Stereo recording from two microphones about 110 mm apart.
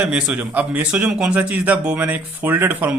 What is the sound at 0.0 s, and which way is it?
A man's voice, 10° right (ahead or behind).